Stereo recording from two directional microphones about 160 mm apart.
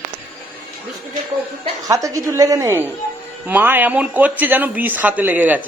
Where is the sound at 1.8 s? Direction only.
20° right (ahead or behind).